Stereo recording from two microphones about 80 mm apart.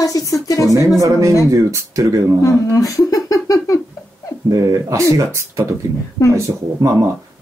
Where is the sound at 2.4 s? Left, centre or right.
Left.